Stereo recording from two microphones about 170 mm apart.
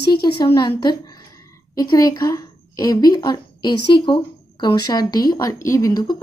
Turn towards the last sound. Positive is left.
turn(degrees=20)  # may be behind; listen again after turning